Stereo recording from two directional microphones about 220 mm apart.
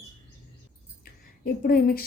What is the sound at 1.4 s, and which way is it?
Speech, 40° left (ahead or behind).